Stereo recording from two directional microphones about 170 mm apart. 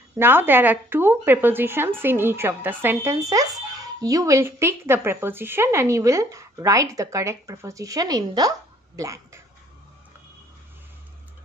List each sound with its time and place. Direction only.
0.2 s speech: 10° right (ahead or behind)